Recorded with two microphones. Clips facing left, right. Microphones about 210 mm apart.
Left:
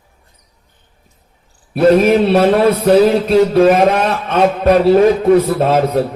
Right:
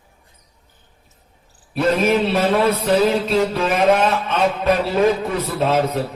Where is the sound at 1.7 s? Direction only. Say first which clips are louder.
Left 7 dB; 45° left (ahead or behind).